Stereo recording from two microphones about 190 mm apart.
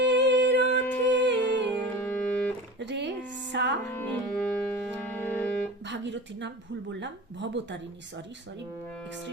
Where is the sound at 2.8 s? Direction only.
65° right (ahead or behind).